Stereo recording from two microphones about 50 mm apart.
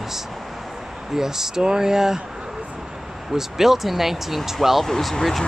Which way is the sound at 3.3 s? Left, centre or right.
Centre.